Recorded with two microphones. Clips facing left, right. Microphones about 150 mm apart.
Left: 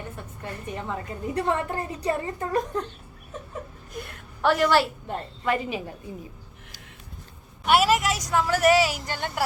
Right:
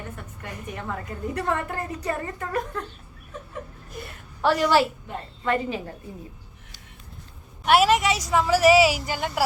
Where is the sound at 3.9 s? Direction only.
Centre (ahead or behind).